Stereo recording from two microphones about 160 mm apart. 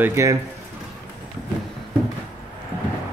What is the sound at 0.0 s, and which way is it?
Speech, 20° right (ahead or behind).